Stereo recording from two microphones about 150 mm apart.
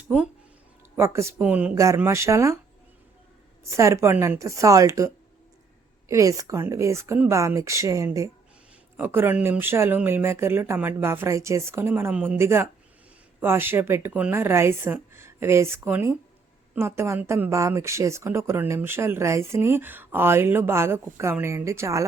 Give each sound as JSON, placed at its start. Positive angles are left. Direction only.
{"t": 0.9, "sound": "speech", "side_deg": -20}
{"t": 1.7, "sound": "speech", "side_deg": -20}
{"t": 3.7, "sound": "speech", "side_deg": -20}